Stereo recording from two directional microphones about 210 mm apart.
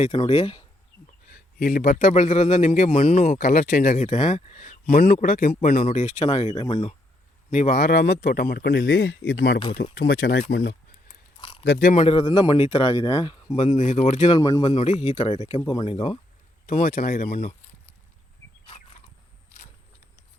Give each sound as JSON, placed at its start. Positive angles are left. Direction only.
{"t": 0.0, "sound": "speech", "side_deg": 25}
{"t": 1.3, "sound": "a man's voice", "side_deg": 45}
{"t": 7.5, "sound": "speech", "side_deg": 40}
{"t": 10.4, "sound": "a man's voice", "side_deg": 40}
{"t": 11.3, "sound": "a sound", "side_deg": 25}
{"t": 11.6, "sound": "speech", "side_deg": 50}
{"t": 11.9, "sound": "speech", "side_deg": 25}
{"t": 13.6, "sound": "a man's voice", "side_deg": 30}
{"t": 14.3, "sound": "speech", "side_deg": 15}
{"t": 14.8, "sound": "speech", "side_deg": 30}
{"t": 16.6, "sound": "a man's voice", "side_deg": 40}